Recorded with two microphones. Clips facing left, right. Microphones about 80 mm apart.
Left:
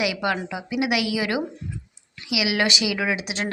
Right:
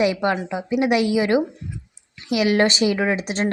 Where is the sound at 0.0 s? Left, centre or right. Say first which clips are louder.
Right 5 dB; right.